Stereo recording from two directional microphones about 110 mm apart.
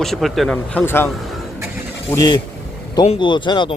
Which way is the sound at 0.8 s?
20° left (ahead or behind).